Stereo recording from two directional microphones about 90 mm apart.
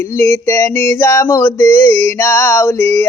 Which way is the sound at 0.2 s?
30° left (ahead or behind).